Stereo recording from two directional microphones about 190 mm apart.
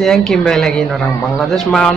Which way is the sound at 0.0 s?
Centre (ahead or behind).